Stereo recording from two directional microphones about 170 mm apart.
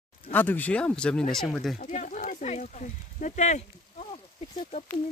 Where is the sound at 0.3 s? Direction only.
10° left (ahead or behind).